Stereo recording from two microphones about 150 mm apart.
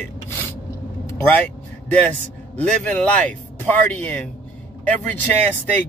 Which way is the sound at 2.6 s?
10° left (ahead or behind).